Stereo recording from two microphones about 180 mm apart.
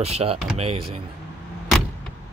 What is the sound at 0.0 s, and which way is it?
Speech, 35° right (ahead or behind).